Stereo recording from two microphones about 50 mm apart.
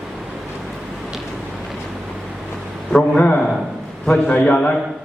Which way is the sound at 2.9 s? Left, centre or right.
Left.